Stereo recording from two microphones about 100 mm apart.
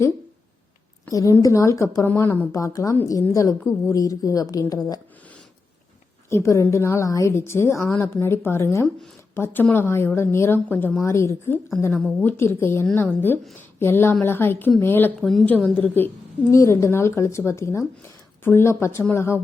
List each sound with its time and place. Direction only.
1.1 s a woman's voice: 35° left (ahead or behind)
6.3 s a woman's voice: 30° left (ahead or behind)
15.2 s a woman's voice: centre (ahead or behind)
15.4 s a woman's voice: 10° left (ahead or behind)